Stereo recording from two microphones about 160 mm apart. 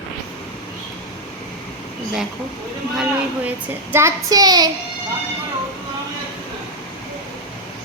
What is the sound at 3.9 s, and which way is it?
Child singing, 20° right (ahead or behind).